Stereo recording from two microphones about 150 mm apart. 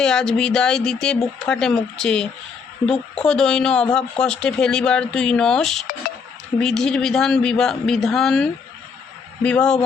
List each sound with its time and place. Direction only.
0.0 s speech: 5° left (ahead or behind)